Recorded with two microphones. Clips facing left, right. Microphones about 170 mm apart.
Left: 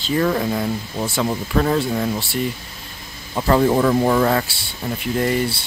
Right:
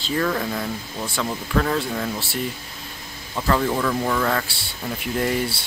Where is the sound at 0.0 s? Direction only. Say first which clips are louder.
Left 4 dB; 10° left (ahead or behind).